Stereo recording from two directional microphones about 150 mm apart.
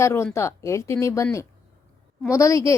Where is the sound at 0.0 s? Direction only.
15° left (ahead or behind).